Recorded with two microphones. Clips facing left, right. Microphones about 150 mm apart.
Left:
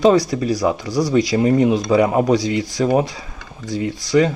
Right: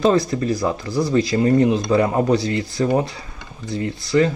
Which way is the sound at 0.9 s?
90° left.